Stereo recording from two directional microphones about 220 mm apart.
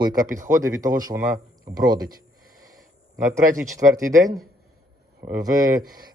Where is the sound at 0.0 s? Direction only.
15° right (ahead or behind).